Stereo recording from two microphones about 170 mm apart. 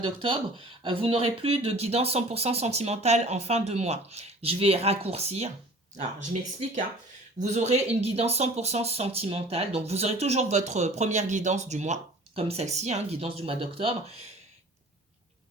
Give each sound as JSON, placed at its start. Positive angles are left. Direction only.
{"t": 0.0, "sound": "speech", "side_deg": -30}
{"t": 7.3, "sound": "speech", "side_deg": -45}